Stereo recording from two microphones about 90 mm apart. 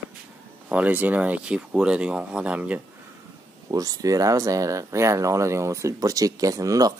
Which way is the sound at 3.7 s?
40° right (ahead or behind).